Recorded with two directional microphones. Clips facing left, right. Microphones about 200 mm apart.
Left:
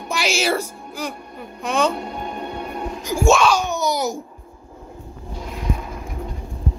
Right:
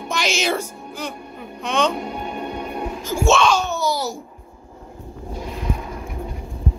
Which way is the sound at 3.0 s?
15° left (ahead or behind).